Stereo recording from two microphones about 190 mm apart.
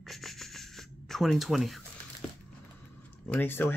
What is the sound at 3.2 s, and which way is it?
Speech, 10° left (ahead or behind).